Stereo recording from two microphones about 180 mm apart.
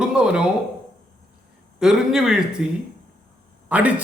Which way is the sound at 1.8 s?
5° right (ahead or behind).